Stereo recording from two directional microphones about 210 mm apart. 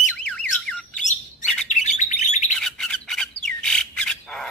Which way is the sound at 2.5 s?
Centre (ahead or behind).